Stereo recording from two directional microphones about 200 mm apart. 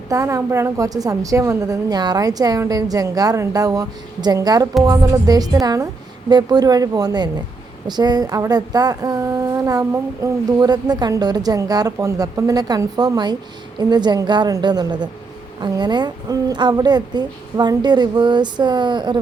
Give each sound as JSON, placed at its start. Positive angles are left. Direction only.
{"t": 0.1, "sound": "a woman's voice", "side_deg": -15}